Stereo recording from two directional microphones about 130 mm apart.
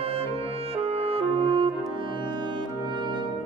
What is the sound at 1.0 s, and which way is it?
Music, 50° right (ahead or behind).